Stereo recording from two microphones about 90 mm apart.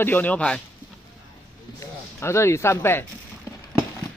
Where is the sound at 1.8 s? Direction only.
30° left (ahead or behind).